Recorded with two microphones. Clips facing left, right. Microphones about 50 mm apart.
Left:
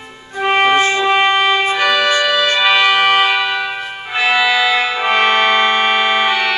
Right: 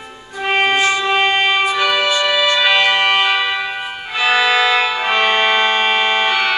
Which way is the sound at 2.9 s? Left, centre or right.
Centre.